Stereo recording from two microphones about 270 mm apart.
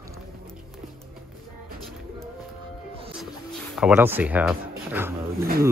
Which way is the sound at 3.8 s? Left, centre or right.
Centre.